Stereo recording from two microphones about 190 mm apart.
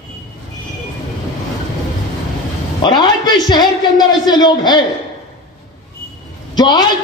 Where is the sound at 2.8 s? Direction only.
25° left (ahead or behind).